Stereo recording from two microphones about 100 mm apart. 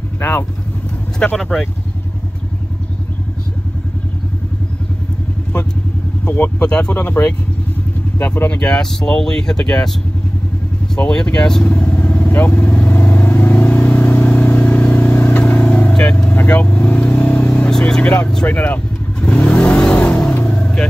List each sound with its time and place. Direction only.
0.2 s speech: 25° left (ahead or behind)
1.2 s speech: 5° left (ahead or behind)
6.2 s speech: 15° left (ahead or behind)
11.0 s vehicle: 10° left (ahead or behind)